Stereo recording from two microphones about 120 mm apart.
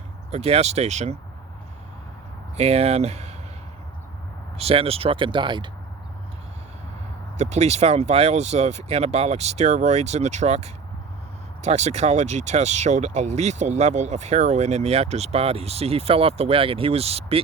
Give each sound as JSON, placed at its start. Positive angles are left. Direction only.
{"t": 0.3, "sound": "speech", "side_deg": -60}
{"t": 2.6, "sound": "speech", "side_deg": -60}
{"t": 4.5, "sound": "speech", "side_deg": -55}
{"t": 7.3, "sound": "speech", "side_deg": -65}